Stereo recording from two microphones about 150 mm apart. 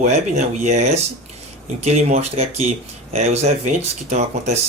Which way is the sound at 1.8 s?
45° right (ahead or behind).